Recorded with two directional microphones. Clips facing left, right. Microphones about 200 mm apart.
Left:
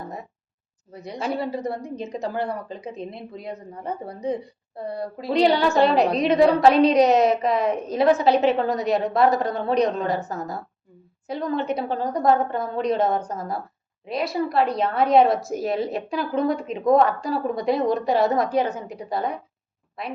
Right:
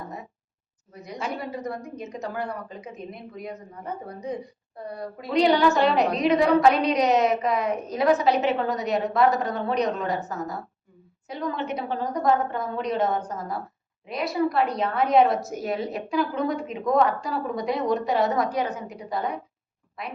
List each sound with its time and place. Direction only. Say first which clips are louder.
1.0 s a woman's voice: left 5 dB; 30° left (ahead or behind)